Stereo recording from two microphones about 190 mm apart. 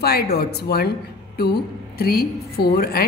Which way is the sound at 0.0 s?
55° left (ahead or behind).